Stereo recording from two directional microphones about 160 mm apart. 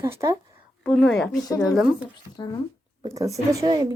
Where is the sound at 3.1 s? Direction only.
20° right (ahead or behind).